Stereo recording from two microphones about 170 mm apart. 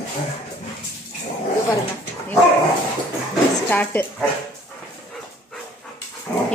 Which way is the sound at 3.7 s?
10° left (ahead or behind).